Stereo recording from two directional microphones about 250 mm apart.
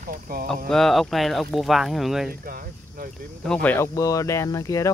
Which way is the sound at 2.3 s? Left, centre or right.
Right.